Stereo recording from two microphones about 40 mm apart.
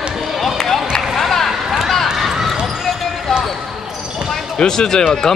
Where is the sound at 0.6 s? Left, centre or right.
Centre.